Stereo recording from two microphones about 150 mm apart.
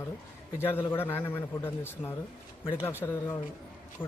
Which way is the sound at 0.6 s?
15° left (ahead or behind).